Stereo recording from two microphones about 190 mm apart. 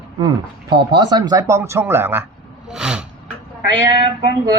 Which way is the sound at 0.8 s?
20° right (ahead or behind).